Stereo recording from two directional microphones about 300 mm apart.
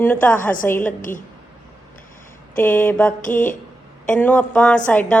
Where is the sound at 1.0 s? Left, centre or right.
Left.